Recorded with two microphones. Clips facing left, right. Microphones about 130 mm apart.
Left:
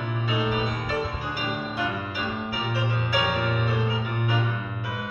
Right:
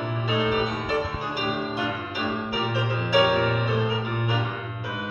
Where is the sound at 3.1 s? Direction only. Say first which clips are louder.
Right 8 dB; 25° right (ahead or behind).